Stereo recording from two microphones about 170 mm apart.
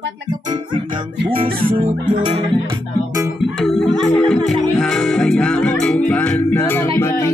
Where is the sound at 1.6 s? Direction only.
35° right (ahead or behind).